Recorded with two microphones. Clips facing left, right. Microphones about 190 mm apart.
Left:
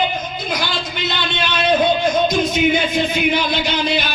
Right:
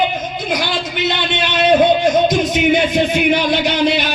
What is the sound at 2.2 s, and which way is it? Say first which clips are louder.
Speech: right 2 dB; 75° right (ahead or behind).